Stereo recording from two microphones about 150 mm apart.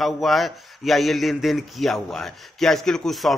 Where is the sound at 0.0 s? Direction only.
Centre (ahead or behind).